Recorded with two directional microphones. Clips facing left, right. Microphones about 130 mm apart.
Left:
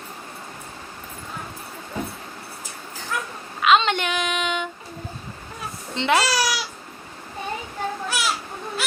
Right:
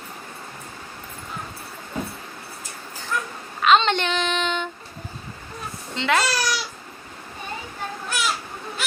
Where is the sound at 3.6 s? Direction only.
5° left (ahead or behind).